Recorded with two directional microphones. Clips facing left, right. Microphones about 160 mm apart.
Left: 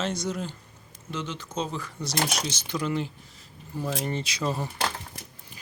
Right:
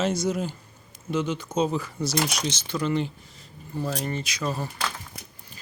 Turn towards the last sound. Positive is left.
turn(degrees=25)  # may be behind; listen again after turning